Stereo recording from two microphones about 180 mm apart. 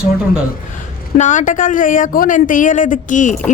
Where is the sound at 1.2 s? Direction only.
45° left (ahead or behind).